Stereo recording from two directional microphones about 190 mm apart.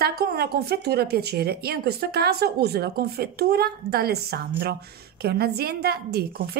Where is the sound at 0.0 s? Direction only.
55° right (ahead or behind).